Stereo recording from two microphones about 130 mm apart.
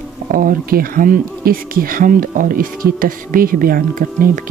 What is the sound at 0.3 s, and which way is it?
Speech, 90° right.